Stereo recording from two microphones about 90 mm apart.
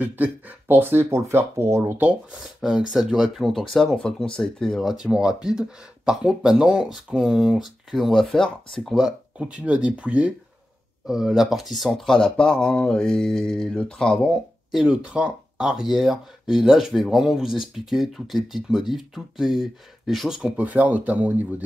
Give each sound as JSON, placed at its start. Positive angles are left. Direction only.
{"t": 0.0, "sound": "speech", "side_deg": -20}
{"t": 2.3, "sound": "speech", "side_deg": -5}
{"t": 3.7, "sound": "speech", "side_deg": 10}
{"t": 14.7, "sound": "speech", "side_deg": -5}
{"t": 20.5, "sound": "speech", "side_deg": -15}